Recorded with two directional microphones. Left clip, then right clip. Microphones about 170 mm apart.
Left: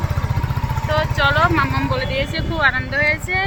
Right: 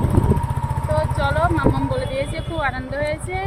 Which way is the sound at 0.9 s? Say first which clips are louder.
Left 5 dB; 10° right (ahead or behind).